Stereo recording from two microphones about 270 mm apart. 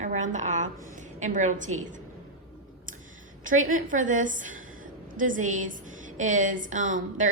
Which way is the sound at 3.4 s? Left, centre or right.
Right.